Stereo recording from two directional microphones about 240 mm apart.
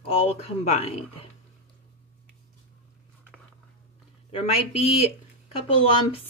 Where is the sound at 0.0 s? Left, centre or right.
Left.